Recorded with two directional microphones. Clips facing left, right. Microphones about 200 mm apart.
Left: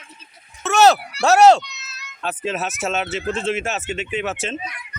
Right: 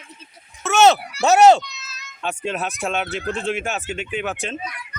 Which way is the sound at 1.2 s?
Centre (ahead or behind).